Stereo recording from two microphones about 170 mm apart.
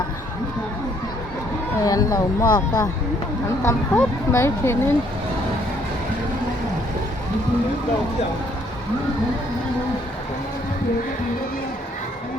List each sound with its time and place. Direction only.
1.8 s speech: 20° left (ahead or behind)